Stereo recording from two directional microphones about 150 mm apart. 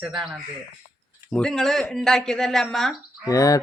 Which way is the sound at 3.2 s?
20° left (ahead or behind).